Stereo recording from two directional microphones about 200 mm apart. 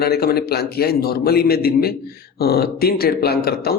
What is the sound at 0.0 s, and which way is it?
Speech, 50° left (ahead or behind).